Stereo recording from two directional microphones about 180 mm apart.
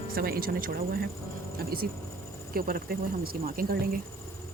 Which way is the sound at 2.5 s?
55° right (ahead or behind).